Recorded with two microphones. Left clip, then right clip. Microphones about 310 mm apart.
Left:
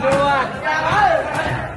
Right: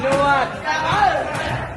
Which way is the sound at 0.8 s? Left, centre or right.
Centre.